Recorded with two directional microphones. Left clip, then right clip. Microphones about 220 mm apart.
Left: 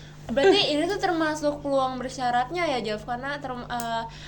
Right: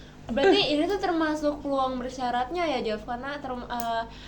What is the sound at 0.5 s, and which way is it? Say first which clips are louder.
A woman's voice: left 1 dB; 40° left (ahead or behind).